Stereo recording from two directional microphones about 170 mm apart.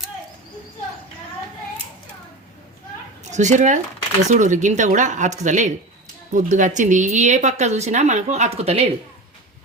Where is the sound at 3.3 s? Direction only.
45° right (ahead or behind).